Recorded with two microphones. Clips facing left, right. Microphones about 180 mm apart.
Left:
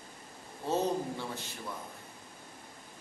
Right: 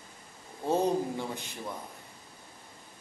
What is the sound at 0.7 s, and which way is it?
Speech, 15° right (ahead or behind).